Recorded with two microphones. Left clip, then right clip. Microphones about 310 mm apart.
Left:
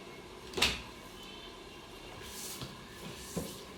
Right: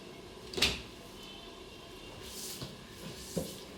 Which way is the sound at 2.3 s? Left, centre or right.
Centre.